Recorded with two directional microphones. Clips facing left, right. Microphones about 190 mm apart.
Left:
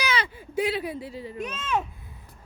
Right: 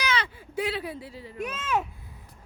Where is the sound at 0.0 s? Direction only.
10° left (ahead or behind).